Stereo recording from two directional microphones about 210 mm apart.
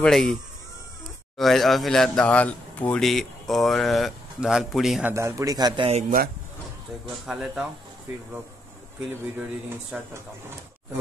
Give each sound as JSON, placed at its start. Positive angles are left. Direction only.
{"t": 0.0, "sound": "speech", "side_deg": 0}
{"t": 1.4, "sound": "speech", "side_deg": 0}
{"t": 5.1, "sound": "a man's voice", "side_deg": -15}
{"t": 5.9, "sound": "speech", "side_deg": -35}
{"t": 7.2, "sound": "speech", "side_deg": -5}
{"t": 9.9, "sound": "a man's voice", "side_deg": -5}